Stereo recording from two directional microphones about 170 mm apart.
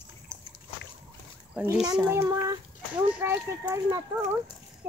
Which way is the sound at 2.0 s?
10° right (ahead or behind).